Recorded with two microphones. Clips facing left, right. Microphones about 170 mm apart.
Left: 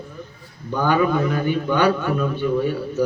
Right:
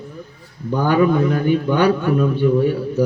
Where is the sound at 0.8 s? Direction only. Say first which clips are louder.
Right 3 dB; 45° right (ahead or behind).